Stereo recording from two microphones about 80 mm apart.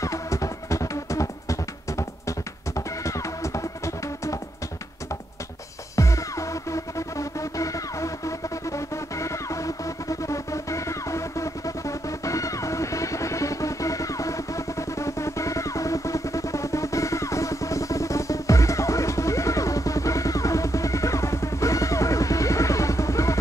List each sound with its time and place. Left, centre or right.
0.0 s music: left
5.9 s music: left